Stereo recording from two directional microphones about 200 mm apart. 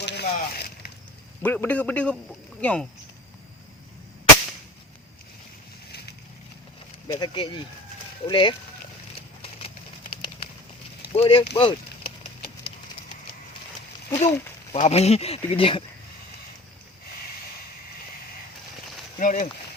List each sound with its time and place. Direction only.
0.0 s a sound: 55° left (ahead or behind)
1.4 s a man's voice: 5° left (ahead or behind)
7.1 s speech: 25° left (ahead or behind)
9.4 s a sound: 30° left (ahead or behind)
11.1 s speech: 25° left (ahead or behind)
14.2 s speech: 35° left (ahead or behind)
19.2 s speech: 40° left (ahead or behind)